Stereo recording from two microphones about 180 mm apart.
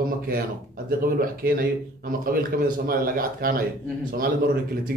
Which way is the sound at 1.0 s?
55° right (ahead or behind).